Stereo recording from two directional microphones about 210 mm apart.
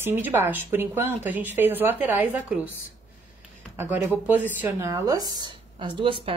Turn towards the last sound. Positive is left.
turn(degrees=-25)  # may be behind; listen again after turning